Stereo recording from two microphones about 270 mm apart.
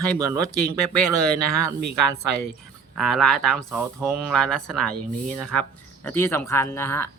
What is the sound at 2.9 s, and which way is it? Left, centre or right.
Speech, centre.